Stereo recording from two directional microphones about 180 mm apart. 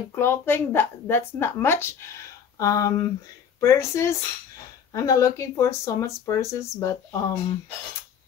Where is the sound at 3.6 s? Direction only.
15° left (ahead or behind).